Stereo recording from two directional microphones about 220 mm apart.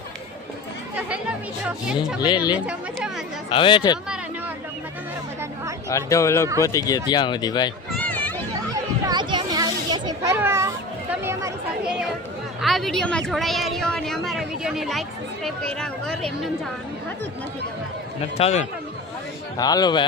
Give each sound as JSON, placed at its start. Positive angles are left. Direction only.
{"t": 1.6, "sound": "speech", "side_deg": -5}
{"t": 2.2, "sound": "speech", "side_deg": 20}
{"t": 5.9, "sound": "speech", "side_deg": 15}
{"t": 8.0, "sound": "children playing", "side_deg": 5}
{"t": 9.0, "sound": "children playing", "side_deg": -20}
{"t": 11.1, "sound": "speech", "side_deg": -10}
{"t": 12.6, "sound": "speech", "side_deg": 0}
{"t": 18.3, "sound": "speech", "side_deg": 30}
{"t": 19.5, "sound": "speech", "side_deg": 15}